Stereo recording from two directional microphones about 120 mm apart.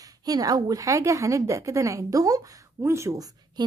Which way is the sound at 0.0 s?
30° right (ahead or behind).